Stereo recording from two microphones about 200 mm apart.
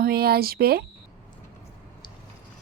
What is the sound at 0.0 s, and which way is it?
Speech, 50° right (ahead or behind).